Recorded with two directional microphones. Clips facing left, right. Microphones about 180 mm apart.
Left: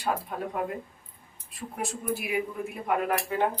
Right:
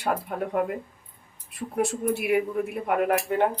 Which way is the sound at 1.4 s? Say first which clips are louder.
Right 8 dB; 65° right (ahead or behind).